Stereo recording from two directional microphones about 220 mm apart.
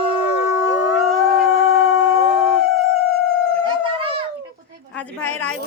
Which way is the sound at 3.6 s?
25° right (ahead or behind).